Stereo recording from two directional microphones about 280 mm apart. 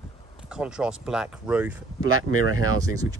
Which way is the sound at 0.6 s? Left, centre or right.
Centre.